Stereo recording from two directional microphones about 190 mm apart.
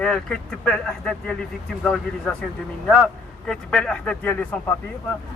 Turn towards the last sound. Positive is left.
turn(degrees=10)  # may be behind; listen again after turning